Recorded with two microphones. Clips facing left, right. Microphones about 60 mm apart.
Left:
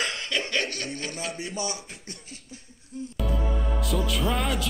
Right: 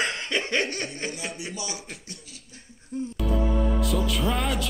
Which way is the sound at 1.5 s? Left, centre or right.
Left.